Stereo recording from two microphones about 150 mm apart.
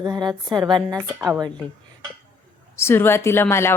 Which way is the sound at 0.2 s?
25° right (ahead or behind).